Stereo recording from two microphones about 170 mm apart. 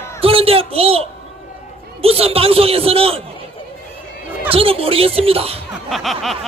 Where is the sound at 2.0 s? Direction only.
35° right (ahead or behind).